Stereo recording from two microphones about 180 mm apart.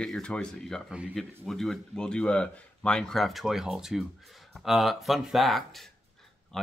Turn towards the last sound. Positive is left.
turn(degrees=0)  # may be behind; listen again after turning